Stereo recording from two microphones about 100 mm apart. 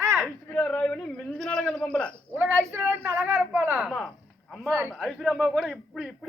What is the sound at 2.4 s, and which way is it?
Speech, 20° right (ahead or behind).